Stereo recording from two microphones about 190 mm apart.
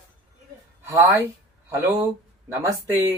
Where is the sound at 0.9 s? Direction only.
15° right (ahead or behind).